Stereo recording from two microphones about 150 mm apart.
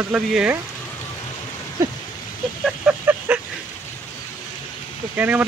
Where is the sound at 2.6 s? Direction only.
10° right (ahead or behind).